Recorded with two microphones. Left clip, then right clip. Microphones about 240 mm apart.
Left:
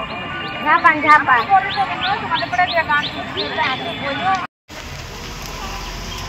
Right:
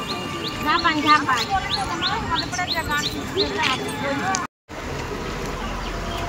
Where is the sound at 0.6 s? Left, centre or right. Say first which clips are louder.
Left 6 dB; left.